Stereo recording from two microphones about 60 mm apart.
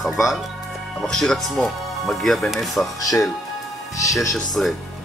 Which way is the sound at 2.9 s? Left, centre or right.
Left.